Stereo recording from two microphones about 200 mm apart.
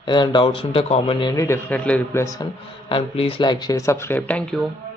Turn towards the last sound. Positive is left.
turn(degrees=5)  # may be behind; listen again after turning